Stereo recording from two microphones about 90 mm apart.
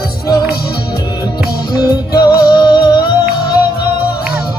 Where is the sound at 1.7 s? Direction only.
50° left (ahead or behind).